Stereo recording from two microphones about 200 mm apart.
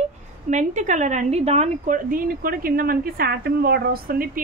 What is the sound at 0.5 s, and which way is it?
Speech, 35° right (ahead or behind).